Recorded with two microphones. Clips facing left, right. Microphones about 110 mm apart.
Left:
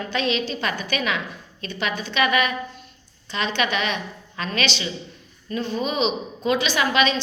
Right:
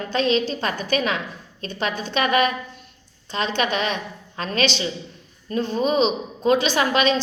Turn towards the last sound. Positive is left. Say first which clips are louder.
# right 1 dB
turn(degrees=-45)  # may be behind; listen again after turning